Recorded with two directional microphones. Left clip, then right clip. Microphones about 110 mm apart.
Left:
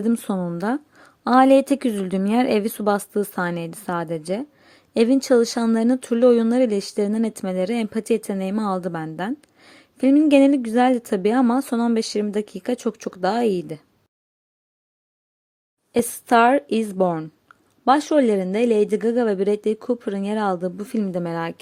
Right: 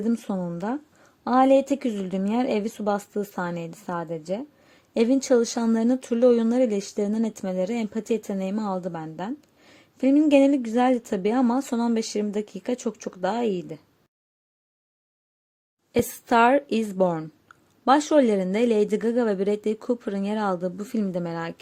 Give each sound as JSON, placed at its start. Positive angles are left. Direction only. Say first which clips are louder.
{"t": 0.0, "sound": "a woman's voice", "louder": "left 4 dB", "side_deg": 30}
{"t": 4.7, "sound": "speech", "louder": "left 4 dB", "side_deg": 25}
{"t": 15.9, "sound": "speech", "louder": "left 4 dB", "side_deg": 25}